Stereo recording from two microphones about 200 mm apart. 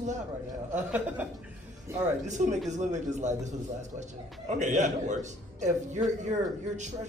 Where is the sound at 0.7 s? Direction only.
10° right (ahead or behind).